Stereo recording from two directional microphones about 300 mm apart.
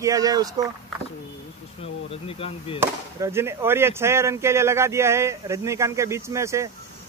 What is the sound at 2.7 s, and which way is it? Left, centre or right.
Speech, centre.